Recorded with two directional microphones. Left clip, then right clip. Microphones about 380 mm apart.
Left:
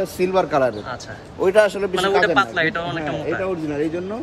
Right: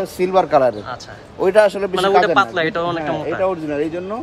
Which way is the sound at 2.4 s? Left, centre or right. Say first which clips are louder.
Right 2 dB; centre.